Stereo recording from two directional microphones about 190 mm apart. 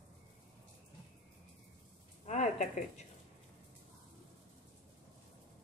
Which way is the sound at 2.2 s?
35° left (ahead or behind).